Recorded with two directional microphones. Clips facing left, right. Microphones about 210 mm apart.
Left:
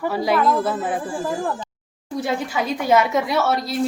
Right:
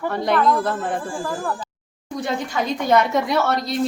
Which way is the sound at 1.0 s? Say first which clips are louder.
Left 2 dB; 20° left (ahead or behind).